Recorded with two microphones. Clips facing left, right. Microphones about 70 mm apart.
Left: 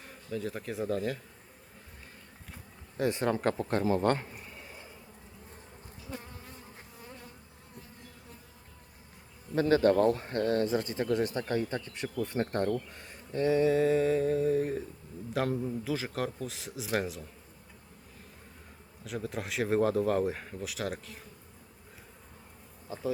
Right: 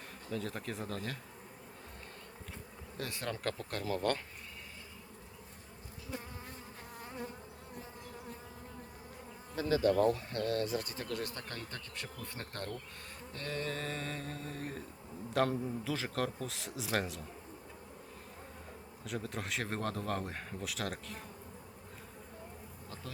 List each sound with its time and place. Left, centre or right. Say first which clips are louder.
0.3 s speech: left 4 dB; centre
3.0 s speech: left 10 dB; left
9.6 s speech: left 5 dB; left
13.3 s speech: left 14 dB; centre
19.0 s speech: left 4 dB; centre